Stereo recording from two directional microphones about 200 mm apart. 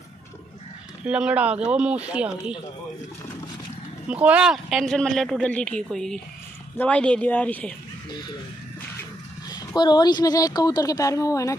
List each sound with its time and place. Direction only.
1.0 s a man's voice: 5° right (ahead or behind)
4.1 s a man's voice: 5° right (ahead or behind)
9.5 s a woman's voice: 20° left (ahead or behind)